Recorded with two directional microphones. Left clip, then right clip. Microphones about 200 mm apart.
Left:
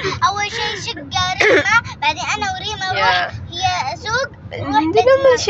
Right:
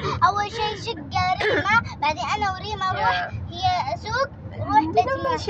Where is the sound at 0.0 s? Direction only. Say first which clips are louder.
Left 3 dB; 30° right (ahead or behind).